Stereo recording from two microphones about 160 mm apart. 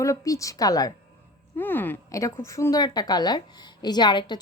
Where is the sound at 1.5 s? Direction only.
10° left (ahead or behind).